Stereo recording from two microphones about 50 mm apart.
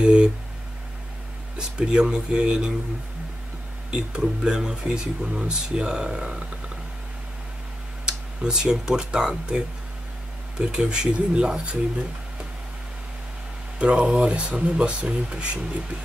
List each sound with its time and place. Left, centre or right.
0.0 s a sound: centre
1.6 s speech: centre
3.9 s speech: centre
8.0 s speech: centre
10.6 s speech: centre
13.7 s speech: right